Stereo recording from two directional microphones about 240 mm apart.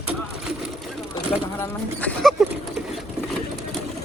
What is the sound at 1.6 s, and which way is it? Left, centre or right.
Speech, centre.